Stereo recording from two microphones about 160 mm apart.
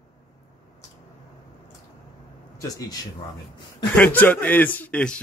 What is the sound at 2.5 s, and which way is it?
Speech, 20° left (ahead or behind).